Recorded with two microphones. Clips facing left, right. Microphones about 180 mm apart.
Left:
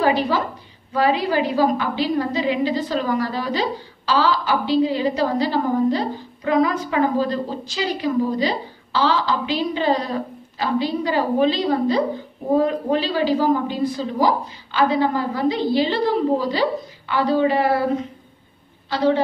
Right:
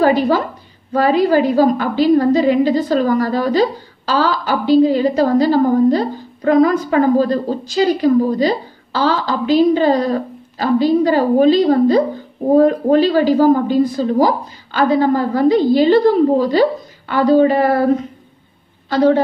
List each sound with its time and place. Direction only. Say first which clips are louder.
0.0 s a woman's voice: right 6 dB; 45° right (ahead or behind)
18.9 s a woman's voice: right 6 dB; 45° right (ahead or behind)